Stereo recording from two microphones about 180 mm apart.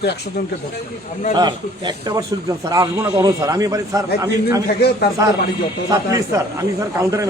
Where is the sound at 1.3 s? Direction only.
25° right (ahead or behind).